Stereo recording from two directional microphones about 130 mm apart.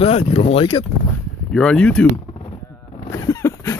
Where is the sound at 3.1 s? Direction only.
25° left (ahead or behind).